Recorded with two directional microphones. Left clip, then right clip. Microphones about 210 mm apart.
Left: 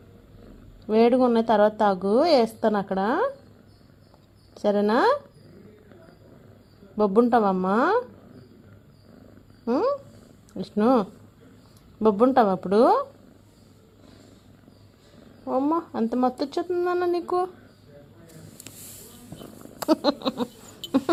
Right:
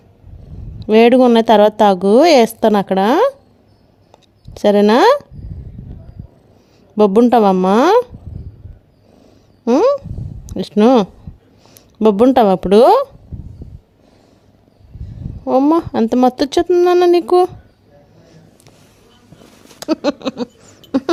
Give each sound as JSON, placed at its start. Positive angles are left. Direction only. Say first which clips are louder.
{"t": 0.8, "sound": "a woman's voice", "louder": "right 10 dB", "side_deg": -50}
{"t": 4.5, "sound": "a woman's voice", "louder": "right 11 dB", "side_deg": -50}
{"t": 6.9, "sound": "a woman's voice", "louder": "right 9 dB", "side_deg": -55}
{"t": 9.6, "sound": "a sound", "louder": "right 12 dB", "side_deg": -55}
{"t": 10.5, "sound": "speech", "louder": "right 10 dB", "side_deg": -55}
{"t": 15.4, "sound": "a woman's voice", "louder": "right 12 dB", "side_deg": -55}
{"t": 20.0, "sound": "a sound", "louder": "right 6 dB", "side_deg": -45}